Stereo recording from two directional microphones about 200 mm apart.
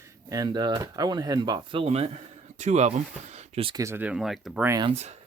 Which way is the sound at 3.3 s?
30° right (ahead or behind).